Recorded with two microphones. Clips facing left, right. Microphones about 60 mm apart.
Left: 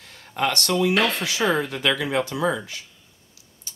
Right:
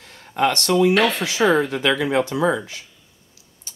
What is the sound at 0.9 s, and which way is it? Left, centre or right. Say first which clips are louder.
Speech: right 3 dB; centre.